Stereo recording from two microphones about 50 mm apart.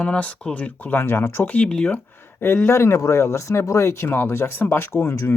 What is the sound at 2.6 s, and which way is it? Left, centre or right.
Speech, left.